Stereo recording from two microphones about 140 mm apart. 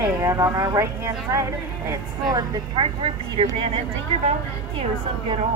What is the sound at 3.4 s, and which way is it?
Speech, 50° right (ahead or behind).